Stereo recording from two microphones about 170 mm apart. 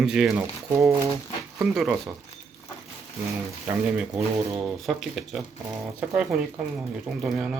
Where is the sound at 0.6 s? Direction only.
20° right (ahead or behind).